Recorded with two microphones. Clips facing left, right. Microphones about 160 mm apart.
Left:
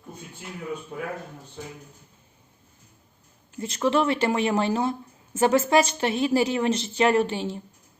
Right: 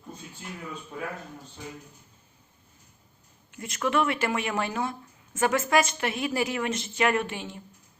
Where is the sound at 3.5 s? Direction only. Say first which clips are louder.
Left 4 dB; 30° left (ahead or behind).